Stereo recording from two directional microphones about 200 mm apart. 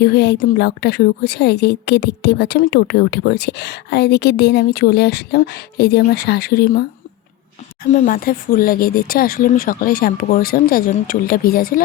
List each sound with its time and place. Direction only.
0.0 s a woman's voice: 55° left (ahead or behind)
7.9 s speech: 35° left (ahead or behind)